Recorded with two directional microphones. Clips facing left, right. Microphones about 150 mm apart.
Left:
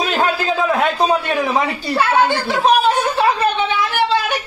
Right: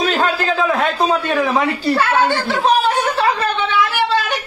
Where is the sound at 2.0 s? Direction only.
15° left (ahead or behind).